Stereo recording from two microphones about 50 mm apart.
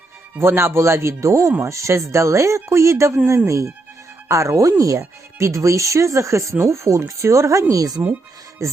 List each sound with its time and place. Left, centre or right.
0.3 s speech: right
1.6 s speech: right
7.2 s speech: right